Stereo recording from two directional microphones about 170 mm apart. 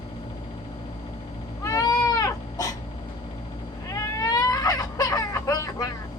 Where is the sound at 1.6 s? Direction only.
20° left (ahead or behind).